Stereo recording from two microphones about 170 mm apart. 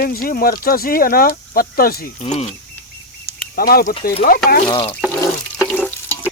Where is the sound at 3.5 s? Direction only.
60° left (ahead or behind).